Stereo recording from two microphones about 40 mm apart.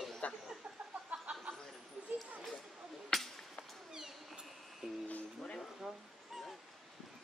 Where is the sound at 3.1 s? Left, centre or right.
Centre.